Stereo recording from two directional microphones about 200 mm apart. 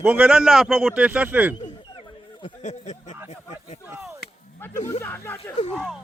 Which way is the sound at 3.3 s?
35° left (ahead or behind).